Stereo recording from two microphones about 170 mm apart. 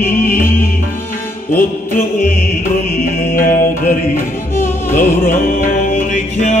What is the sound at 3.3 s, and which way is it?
Music, 55° left (ahead or behind).